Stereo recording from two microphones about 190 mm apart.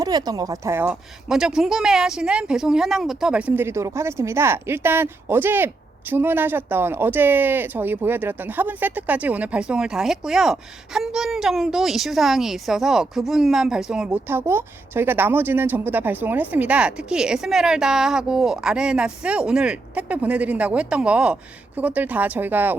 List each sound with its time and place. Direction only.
0.0 s a woman's voice: 20° right (ahead or behind)